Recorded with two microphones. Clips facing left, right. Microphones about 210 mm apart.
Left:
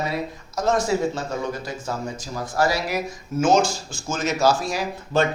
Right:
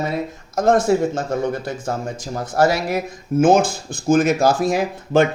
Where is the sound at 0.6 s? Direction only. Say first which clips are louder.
Right 5 dB; 55° right (ahead or behind).